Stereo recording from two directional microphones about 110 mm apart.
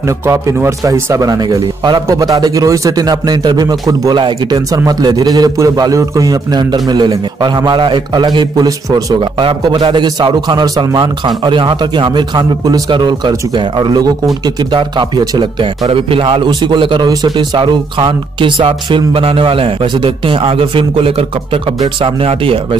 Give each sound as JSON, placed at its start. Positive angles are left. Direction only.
{"t": 0.3, "sound": "a man's voice", "side_deg": -25}
{"t": 17.1, "sound": "a man's voice", "side_deg": -35}
{"t": 17.6, "sound": "speech", "side_deg": -45}